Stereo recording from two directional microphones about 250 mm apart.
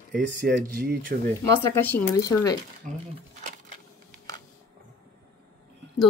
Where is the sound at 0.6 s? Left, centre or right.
Right.